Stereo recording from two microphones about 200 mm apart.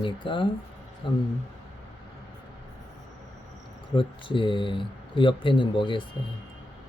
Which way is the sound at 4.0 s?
25° left (ahead or behind).